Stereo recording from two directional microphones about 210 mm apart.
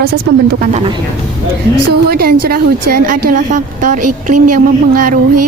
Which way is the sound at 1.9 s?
45° right (ahead or behind).